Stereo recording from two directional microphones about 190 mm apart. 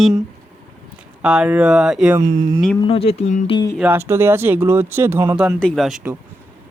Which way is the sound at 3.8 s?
10° right (ahead or behind).